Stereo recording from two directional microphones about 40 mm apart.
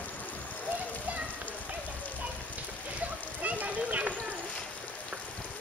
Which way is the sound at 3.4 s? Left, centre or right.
Right.